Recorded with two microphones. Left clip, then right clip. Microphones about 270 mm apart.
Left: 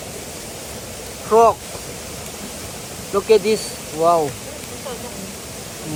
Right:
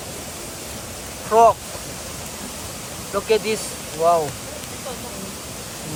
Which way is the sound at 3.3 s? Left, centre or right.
Left.